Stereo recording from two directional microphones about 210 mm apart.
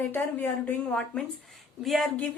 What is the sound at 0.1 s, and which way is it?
A woman's voice, 10° left (ahead or behind).